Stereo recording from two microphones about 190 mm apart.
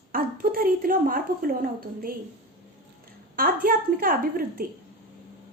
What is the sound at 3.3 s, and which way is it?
Speech, 50° right (ahead or behind).